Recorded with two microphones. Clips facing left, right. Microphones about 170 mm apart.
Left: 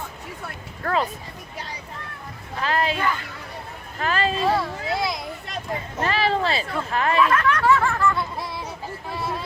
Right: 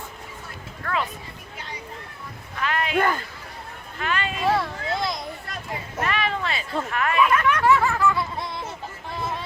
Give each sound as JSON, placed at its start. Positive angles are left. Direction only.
{"t": 0.9, "sound": "speech", "side_deg": 35}
{"t": 2.6, "sound": "speech", "side_deg": 35}
{"t": 4.4, "sound": "children playing", "side_deg": 0}
{"t": 6.0, "sound": "speech", "side_deg": 30}
{"t": 7.2, "sound": "snicker", "side_deg": -5}
{"t": 9.0, "sound": "a sound", "side_deg": 5}